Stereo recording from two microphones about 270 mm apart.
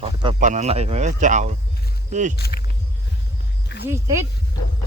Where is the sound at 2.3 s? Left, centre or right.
Left.